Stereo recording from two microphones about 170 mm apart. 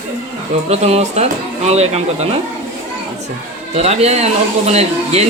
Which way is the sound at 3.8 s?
40° right (ahead or behind).